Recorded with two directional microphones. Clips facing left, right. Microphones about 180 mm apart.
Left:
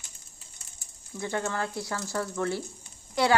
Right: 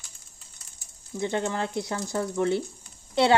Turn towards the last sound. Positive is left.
turn(degrees=-25)  # may be behind; listen again after turning